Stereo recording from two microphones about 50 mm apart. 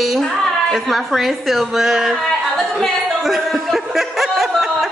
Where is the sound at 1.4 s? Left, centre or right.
Centre.